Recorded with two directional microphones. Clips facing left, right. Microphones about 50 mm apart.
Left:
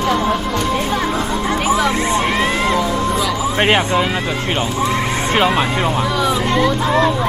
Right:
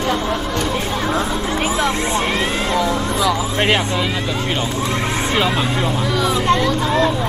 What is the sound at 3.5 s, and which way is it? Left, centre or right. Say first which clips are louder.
Speech: left 3 dB; left.